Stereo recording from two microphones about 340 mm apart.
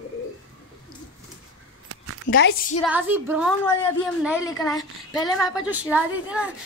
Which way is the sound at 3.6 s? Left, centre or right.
Centre.